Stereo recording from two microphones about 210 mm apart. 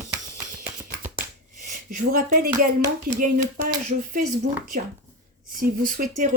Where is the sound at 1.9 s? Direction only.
45° right (ahead or behind).